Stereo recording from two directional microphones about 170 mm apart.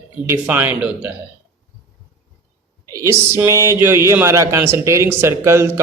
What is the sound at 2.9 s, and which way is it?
Speech, 15° right (ahead or behind).